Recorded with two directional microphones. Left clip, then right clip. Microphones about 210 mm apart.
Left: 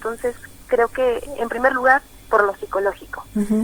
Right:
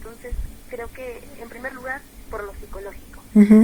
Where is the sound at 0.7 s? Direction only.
35° left (ahead or behind).